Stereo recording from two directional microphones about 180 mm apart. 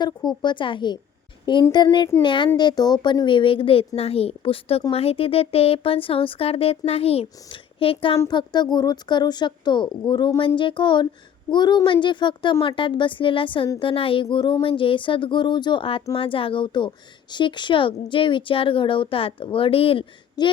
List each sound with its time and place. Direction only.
0.4 s a woman's voice: 25° left (ahead or behind)